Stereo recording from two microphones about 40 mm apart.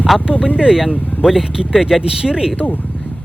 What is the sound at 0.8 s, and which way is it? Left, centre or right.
Speech, centre.